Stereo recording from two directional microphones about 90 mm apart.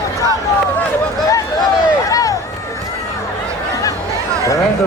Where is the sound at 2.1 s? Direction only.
40° left (ahead or behind).